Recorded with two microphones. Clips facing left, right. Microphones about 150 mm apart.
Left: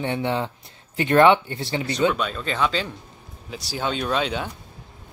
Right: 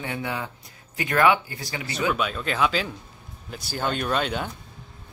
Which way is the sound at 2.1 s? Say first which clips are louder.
Even; 5° right (ahead or behind).